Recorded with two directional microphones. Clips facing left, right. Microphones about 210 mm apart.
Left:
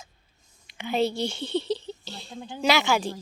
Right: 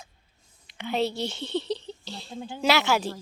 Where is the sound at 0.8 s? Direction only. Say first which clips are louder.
Left 2 dB; centre (ahead or behind).